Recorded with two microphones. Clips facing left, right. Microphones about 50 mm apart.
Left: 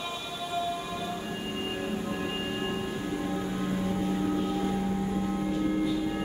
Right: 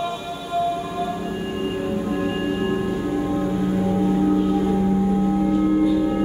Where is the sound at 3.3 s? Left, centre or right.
Centre.